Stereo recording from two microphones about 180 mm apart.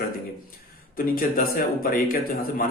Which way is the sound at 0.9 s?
50° left (ahead or behind).